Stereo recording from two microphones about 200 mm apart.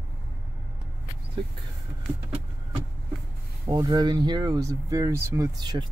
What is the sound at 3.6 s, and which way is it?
Speech, 20° right (ahead or behind).